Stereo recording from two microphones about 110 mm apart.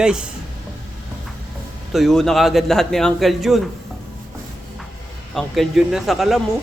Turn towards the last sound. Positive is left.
turn(degrees=0)  # may be behind; listen again after turning